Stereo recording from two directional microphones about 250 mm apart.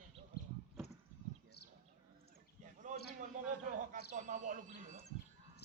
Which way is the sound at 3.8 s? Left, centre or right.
Right.